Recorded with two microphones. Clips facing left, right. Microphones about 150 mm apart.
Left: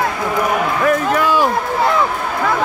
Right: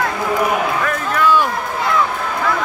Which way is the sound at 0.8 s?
35° left (ahead or behind).